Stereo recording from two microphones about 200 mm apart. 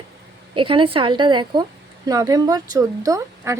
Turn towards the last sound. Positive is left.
turn(degrees=-15)  # may be behind; listen again after turning